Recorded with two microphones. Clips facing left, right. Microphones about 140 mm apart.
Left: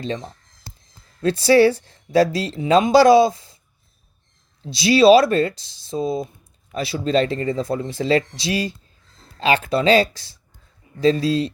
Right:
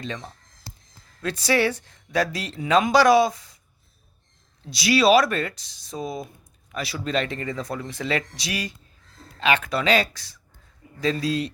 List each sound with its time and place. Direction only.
0.0 s speech: 30° left (ahead or behind)
4.6 s speech: 30° left (ahead or behind)